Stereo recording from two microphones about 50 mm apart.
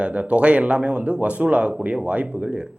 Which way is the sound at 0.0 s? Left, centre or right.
Right.